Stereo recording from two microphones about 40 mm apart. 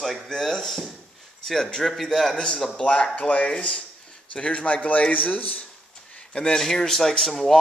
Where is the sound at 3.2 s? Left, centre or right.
Left.